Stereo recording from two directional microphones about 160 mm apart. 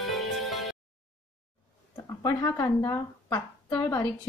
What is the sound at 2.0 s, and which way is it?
A woman's voice, 20° left (ahead or behind).